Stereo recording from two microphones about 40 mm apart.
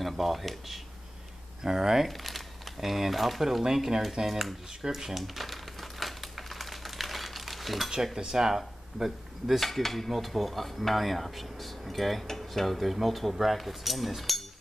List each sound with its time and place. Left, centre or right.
0.0 s speech: centre
1.6 s speech: centre
2.0 s speech: centre
4.8 s crumpling: centre
7.9 s speech: centre
9.6 s speech: centre